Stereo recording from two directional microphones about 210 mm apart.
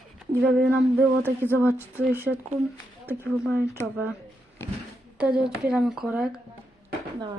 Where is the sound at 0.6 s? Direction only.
5° right (ahead or behind).